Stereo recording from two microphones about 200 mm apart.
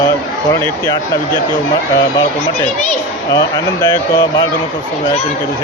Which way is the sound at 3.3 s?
20° left (ahead or behind).